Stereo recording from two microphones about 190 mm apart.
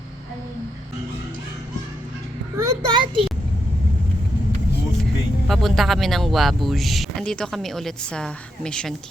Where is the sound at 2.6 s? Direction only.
15° right (ahead or behind).